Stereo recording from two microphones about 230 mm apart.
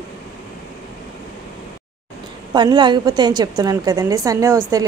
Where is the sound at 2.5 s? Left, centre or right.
Centre.